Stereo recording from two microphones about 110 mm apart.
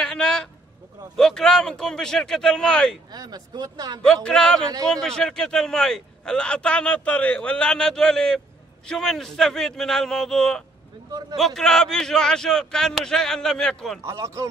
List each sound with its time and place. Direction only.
0.0 s a sound: 5° left (ahead or behind)
1.1 s a man's voice: 5° left (ahead or behind)
3.1 s speech: 40° right (ahead or behind)
4.0 s a man's voice: 5° left (ahead or behind)
14.0 s speech: 25° right (ahead or behind)